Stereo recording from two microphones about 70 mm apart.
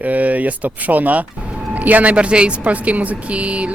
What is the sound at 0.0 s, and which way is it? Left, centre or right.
A woman's voice, right.